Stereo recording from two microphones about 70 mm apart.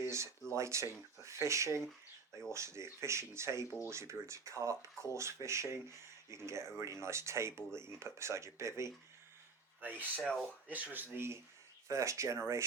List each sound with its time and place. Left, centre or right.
0.5 s speech: right
9.8 s speech: right
10.2 s speech: centre
10.7 s speech: right
11.9 s speech: right